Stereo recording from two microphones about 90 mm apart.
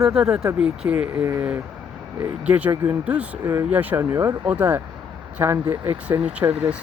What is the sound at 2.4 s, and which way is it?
Speech, 15° right (ahead or behind).